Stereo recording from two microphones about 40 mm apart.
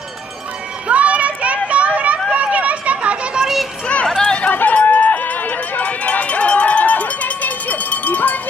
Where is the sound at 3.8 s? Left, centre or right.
Left.